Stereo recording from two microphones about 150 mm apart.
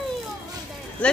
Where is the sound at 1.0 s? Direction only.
10° left (ahead or behind).